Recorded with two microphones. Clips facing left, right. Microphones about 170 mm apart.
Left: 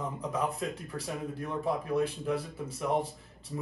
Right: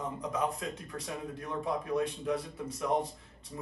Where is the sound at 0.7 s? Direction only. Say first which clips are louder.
Left 2 dB; centre (ahead or behind).